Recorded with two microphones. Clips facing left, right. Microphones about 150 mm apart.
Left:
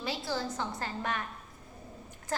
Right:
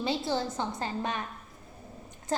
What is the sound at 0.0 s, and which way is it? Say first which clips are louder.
A woman's voice: right 5 dB; 25° right (ahead or behind).